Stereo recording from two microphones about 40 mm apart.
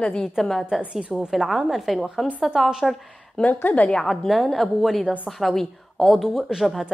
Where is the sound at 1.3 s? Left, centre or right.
Centre.